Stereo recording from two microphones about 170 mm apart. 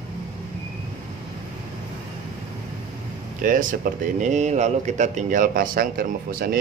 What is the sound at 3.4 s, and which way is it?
A man's voice, 50° right (ahead or behind).